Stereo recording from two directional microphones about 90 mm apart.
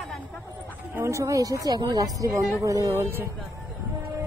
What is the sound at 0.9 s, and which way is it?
Speech, 30° right (ahead or behind).